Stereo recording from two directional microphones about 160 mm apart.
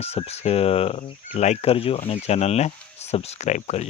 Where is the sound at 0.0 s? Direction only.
40° left (ahead or behind).